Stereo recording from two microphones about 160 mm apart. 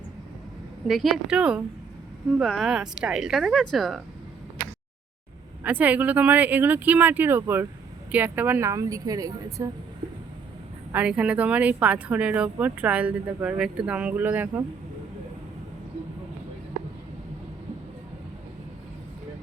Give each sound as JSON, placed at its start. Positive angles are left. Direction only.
{"t": 0.9, "sound": "speech", "side_deg": 0}
{"t": 5.6, "sound": "a woman's voice", "side_deg": -10}
{"t": 10.9, "sound": "speech", "side_deg": -5}